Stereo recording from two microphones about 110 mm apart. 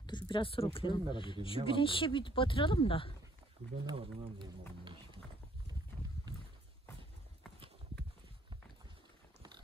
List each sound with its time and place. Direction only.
0.0 s speech: 45° left (ahead or behind)
4.0 s speech: 50° right (ahead or behind)